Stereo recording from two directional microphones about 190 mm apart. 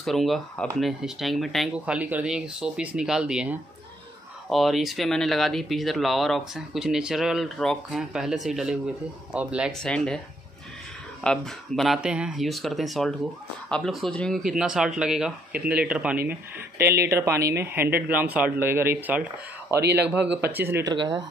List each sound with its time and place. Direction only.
0.0 s speech: centre (ahead or behind)
11.2 s speech: centre (ahead or behind)
20.9 s speech: 25° right (ahead or behind)